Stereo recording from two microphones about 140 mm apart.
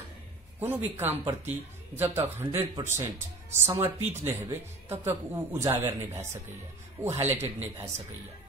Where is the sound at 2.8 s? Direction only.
50° right (ahead or behind).